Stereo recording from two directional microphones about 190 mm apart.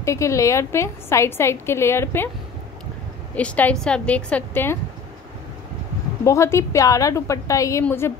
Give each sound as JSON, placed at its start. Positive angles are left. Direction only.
{"t": 0.0, "sound": "a woman's voice", "side_deg": 15}
{"t": 3.3, "sound": "a woman's voice", "side_deg": 10}
{"t": 6.2, "sound": "a woman's voice", "side_deg": 15}